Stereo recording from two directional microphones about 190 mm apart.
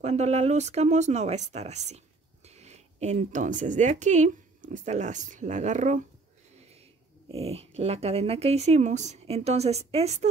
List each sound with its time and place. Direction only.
0.0 s a woman's voice: 35° right (ahead or behind)
7.2 s speech: 30° right (ahead or behind)